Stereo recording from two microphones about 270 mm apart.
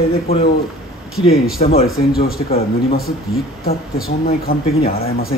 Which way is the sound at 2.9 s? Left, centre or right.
Left.